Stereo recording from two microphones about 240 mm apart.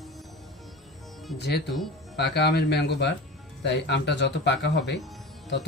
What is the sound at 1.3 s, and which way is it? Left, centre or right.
Speech, left.